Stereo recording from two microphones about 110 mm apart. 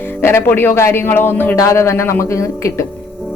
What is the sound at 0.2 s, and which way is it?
Speech, 20° left (ahead or behind).